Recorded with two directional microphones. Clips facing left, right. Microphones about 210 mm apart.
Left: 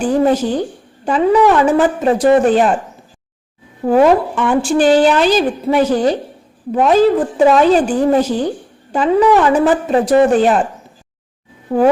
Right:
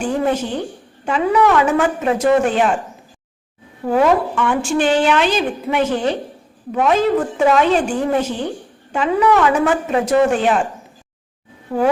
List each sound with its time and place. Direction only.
0.0 s a woman's voice: 35° left (ahead or behind)
3.8 s a woman's voice: 30° left (ahead or behind)
11.7 s speech: 30° left (ahead or behind)